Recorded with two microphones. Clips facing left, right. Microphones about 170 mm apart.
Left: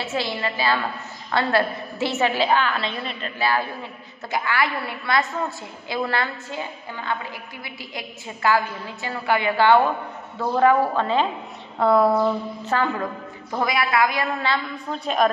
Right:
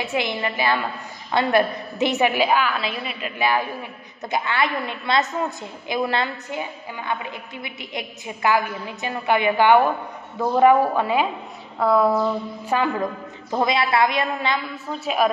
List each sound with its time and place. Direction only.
0.0 s a woman's voice: 15° right (ahead or behind)
11.8 s a woman's voice: centre (ahead or behind)
12.6 s a woman's voice: 10° right (ahead or behind)
13.5 s a woman's voice: 25° right (ahead or behind)
14.9 s a woman's voice: 5° right (ahead or behind)